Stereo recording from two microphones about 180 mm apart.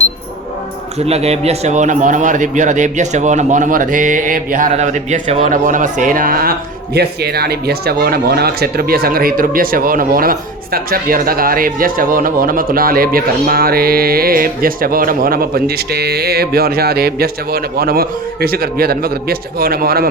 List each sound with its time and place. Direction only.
0.9 s a man's voice: 35° right (ahead or behind); by 20.1 s 55° right (ahead or behind)